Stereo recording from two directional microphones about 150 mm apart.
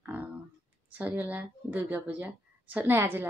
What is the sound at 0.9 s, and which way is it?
Speech, 10° right (ahead or behind).